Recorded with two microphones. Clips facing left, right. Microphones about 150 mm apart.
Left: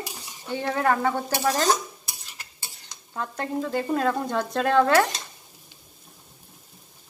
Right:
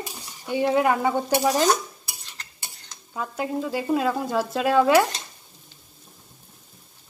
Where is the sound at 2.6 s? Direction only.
10° right (ahead or behind).